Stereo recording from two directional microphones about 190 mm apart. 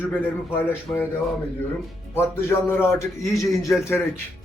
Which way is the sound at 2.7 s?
10° left (ahead or behind).